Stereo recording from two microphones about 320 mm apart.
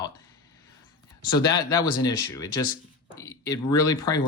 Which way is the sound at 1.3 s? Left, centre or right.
Centre.